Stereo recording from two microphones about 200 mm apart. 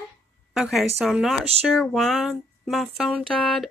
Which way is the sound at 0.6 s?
Centre (ahead or behind).